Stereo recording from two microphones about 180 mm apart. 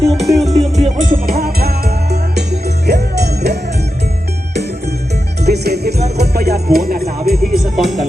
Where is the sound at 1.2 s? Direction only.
60° right (ahead or behind).